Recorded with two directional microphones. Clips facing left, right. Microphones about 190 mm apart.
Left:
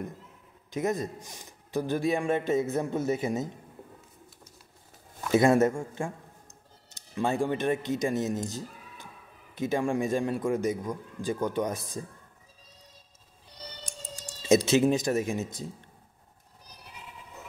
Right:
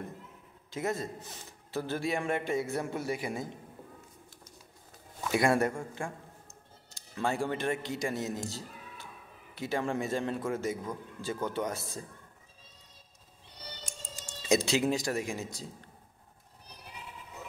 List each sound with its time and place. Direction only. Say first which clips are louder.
0.7 s a man's voice: left 4 dB; 20° left (ahead or behind)
5.3 s a man's voice: left 6 dB; 20° left (ahead or behind)
14.5 s a man's voice: left 5 dB; 20° left (ahead or behind)